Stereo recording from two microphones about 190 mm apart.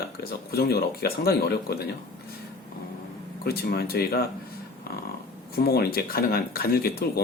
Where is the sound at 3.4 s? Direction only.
55° left (ahead or behind).